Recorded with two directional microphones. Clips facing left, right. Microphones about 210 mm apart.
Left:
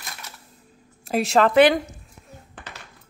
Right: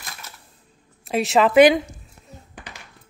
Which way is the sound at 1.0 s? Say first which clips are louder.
Right 1 dB; centre (ahead or behind).